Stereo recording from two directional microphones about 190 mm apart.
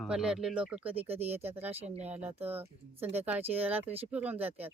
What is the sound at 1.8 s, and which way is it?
Speech, 35° right (ahead or behind).